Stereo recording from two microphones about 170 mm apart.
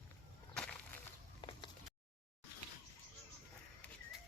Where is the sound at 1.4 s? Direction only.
30° left (ahead or behind).